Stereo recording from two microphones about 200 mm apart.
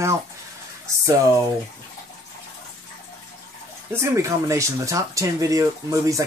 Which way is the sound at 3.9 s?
15° right (ahead or behind).